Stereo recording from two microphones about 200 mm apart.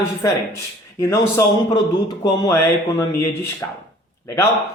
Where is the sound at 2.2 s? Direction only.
20° left (ahead or behind).